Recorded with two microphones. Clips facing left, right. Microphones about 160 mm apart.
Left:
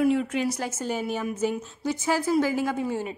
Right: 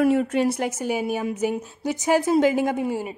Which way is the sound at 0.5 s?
15° right (ahead or behind).